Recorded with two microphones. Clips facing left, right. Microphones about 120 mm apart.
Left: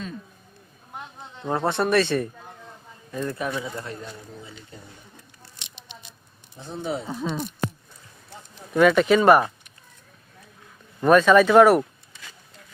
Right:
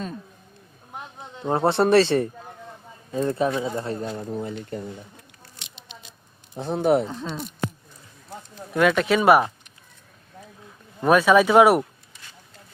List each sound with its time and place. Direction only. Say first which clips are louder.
1.4 s speech: right 4 dB; 25° right (ahead or behind)
4.0 s speech: right 10 dB; 60° right (ahead or behind)
6.6 s speech: right 10 dB; 65° right (ahead or behind)
7.3 s speech: left 3 dB; centre (ahead or behind)
8.7 s speech: left 3 dB; centre (ahead or behind)
11.0 s speech: left 1 dB; 10° right (ahead or behind)